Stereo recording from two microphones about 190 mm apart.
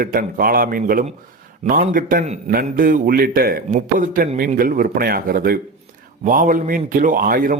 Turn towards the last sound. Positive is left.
turn(degrees=-45)  # may be behind; listen again after turning